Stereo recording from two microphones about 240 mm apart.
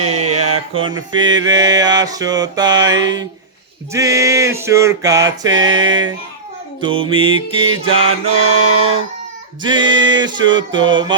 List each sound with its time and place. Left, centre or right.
0.3 s mantra: right
0.7 s mantra: right
7.9 s mantra: right
9.6 s mantra: centre